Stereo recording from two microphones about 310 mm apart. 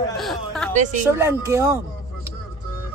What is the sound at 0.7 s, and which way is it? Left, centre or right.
Speech, right.